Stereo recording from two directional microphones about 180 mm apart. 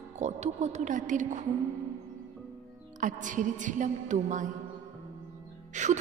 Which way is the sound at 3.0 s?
45° right (ahead or behind).